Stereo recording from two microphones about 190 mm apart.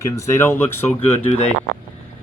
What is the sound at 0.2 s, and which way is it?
Speech, 15° left (ahead or behind).